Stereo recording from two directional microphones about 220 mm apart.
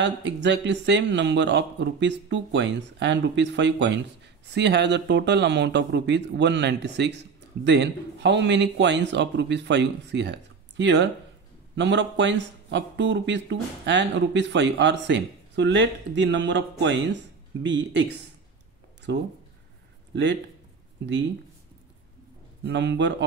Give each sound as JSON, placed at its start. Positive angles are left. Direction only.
{"t": 0.0, "sound": "speech", "side_deg": -50}
{"t": 19.1, "sound": "speech", "side_deg": -50}
{"t": 21.0, "sound": "speech", "side_deg": -50}
{"t": 22.7, "sound": "speech", "side_deg": -55}